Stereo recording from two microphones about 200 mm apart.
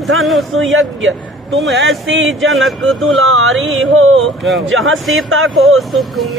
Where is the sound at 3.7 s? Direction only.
80° right.